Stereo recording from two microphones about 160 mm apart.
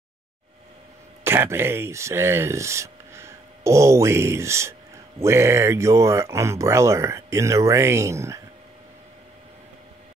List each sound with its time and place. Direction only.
1.2 s speech: 15° right (ahead or behind)